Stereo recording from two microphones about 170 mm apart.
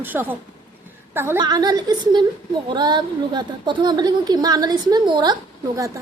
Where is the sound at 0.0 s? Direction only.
10° right (ahead or behind).